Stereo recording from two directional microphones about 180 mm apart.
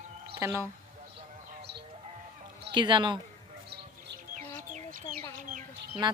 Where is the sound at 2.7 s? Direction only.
25° right (ahead or behind).